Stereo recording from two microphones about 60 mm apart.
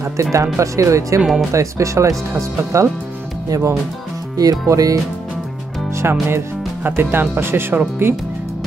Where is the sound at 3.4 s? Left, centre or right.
Right.